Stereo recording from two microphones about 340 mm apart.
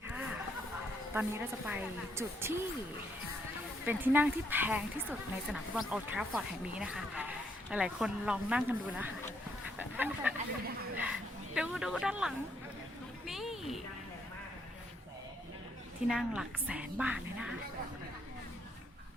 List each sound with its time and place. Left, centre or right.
0.1 s a sound: centre
1.1 s a woman's voice: centre
3.8 s speech: centre
9.7 s duck: centre
10.9 s speech: centre
13.2 s a sound: centre
16.0 s speech: centre